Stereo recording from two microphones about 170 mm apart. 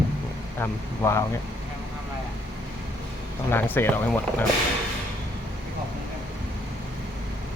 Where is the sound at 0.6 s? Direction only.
15° left (ahead or behind).